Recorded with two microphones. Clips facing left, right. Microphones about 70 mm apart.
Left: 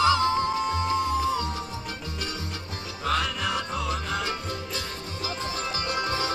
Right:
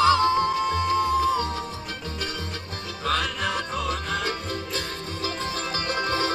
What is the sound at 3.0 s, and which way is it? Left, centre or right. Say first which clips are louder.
Music: right 1 dB; right.